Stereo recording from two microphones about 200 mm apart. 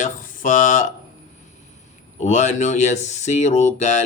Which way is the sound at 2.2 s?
35° left (ahead or behind).